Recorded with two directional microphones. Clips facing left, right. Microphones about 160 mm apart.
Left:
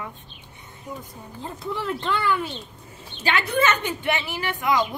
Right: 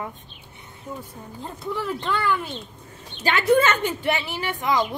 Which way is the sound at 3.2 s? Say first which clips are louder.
Right 4 dB; 45° right (ahead or behind).